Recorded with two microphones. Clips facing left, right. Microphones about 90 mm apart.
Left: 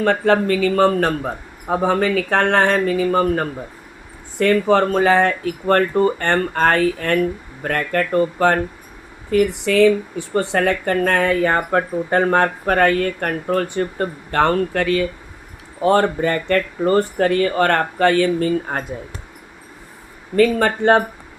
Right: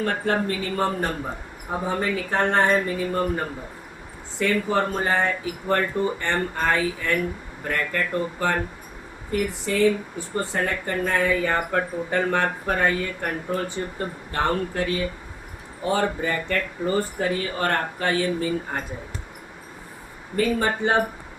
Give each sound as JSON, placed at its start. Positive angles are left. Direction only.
{"t": 0.0, "sound": "a man's voice", "side_deg": 90}
{"t": 4.7, "sound": "speech", "side_deg": 90}
{"t": 7.6, "sound": "speech", "side_deg": 80}
{"t": 9.4, "sound": "speech", "side_deg": 90}
{"t": 15.8, "sound": "speech", "side_deg": 65}
{"t": 20.3, "sound": "speech", "side_deg": 85}